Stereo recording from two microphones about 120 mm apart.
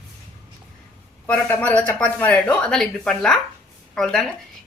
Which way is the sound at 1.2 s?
15° left (ahead or behind).